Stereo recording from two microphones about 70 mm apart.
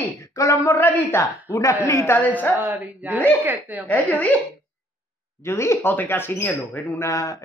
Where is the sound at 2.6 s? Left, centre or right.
Right.